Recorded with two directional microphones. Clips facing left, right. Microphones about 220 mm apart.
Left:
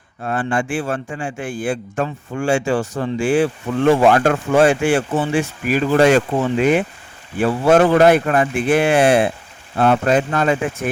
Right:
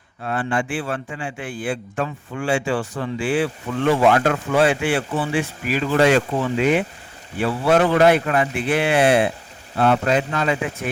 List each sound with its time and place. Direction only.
0.2 s a man's voice: 45° left (ahead or behind)